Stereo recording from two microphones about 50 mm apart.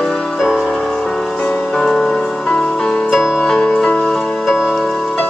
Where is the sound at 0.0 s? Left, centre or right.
Centre.